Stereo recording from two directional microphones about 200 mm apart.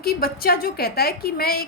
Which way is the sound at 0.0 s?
50° left (ahead or behind).